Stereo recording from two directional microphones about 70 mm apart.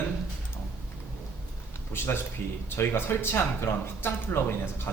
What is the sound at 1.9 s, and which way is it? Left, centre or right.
Speech, left.